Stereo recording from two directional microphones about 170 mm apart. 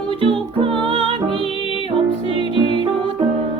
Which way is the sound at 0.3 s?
30° right (ahead or behind).